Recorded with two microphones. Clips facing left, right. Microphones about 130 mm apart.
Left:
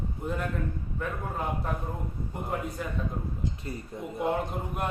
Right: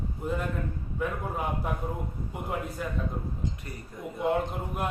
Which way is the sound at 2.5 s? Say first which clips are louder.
Left 1 dB; 5° right (ahead or behind).